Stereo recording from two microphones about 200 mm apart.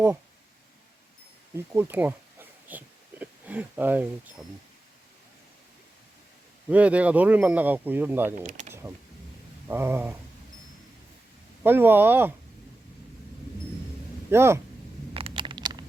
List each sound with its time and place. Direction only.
1.5 s speech: 10° right (ahead or behind)
6.7 s speech: 5° right (ahead or behind)
8.4 s speech: 35° right (ahead or behind)
9.6 s speech: 10° right (ahead or behind)
11.6 s speech: 10° right (ahead or behind)
14.3 s speech: 10° right (ahead or behind)
15.1 s a sound: 25° right (ahead or behind)